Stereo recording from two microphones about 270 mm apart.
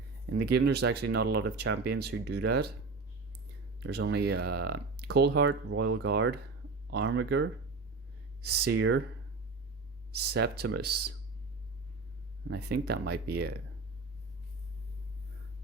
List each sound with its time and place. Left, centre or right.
0.3 s speech: right
3.8 s speech: right
10.2 s speech: right
12.5 s speech: right